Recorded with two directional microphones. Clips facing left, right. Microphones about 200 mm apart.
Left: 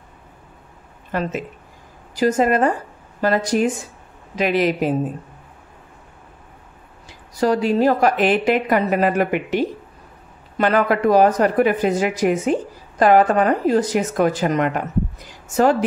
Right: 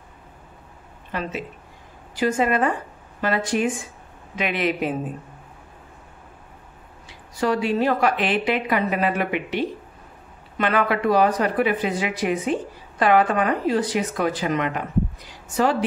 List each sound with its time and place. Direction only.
1.1 s a woman's voice: 45° left (ahead or behind)
7.3 s a woman's voice: 40° left (ahead or behind)